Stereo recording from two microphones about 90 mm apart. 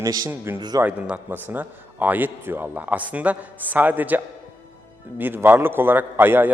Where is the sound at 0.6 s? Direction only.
50° right (ahead or behind).